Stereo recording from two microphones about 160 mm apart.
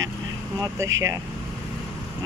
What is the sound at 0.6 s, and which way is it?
Speech, 20° right (ahead or behind).